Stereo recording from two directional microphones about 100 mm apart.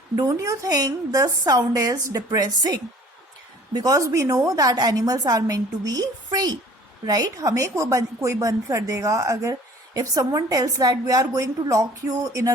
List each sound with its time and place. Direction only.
0.2 s a woman's voice: 35° right (ahead or behind)